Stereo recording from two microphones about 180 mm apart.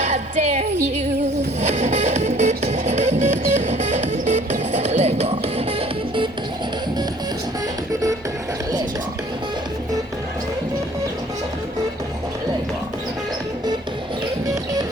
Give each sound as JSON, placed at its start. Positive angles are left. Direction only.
{"t": 0.0, "sound": "music", "side_deg": -40}
{"t": 1.6, "sound": "music", "side_deg": -40}
{"t": 14.4, "sound": "music", "side_deg": -20}